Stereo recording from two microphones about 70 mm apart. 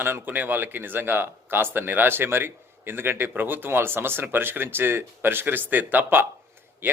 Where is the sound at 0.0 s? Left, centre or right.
Right.